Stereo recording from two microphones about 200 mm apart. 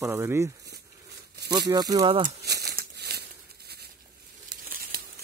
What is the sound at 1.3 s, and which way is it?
Tearing, 55° right (ahead or behind).